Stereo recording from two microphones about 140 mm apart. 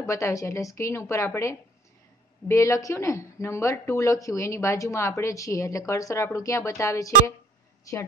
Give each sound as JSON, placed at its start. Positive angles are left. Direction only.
{"t": 0.0, "sound": "speech", "side_deg": 20}